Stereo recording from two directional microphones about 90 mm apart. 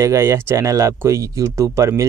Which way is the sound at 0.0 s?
30° right (ahead or behind).